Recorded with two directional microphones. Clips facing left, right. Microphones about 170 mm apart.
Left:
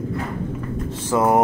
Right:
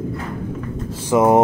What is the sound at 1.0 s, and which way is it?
Speech, 20° right (ahead or behind).